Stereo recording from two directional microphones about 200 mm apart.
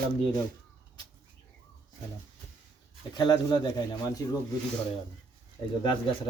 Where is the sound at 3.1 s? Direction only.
20° left (ahead or behind).